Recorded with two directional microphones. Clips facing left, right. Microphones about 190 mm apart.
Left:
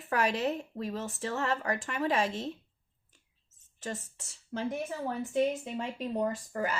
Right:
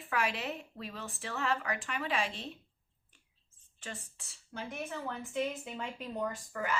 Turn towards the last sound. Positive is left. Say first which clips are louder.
# left 4 dB
turn(degrees=35)  # may be behind; listen again after turning